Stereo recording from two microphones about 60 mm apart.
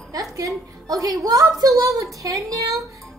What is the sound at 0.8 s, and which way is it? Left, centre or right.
A woman's voice, right.